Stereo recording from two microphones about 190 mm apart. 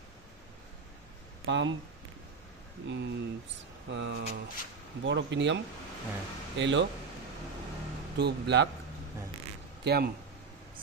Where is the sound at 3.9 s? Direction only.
70° right (ahead or behind).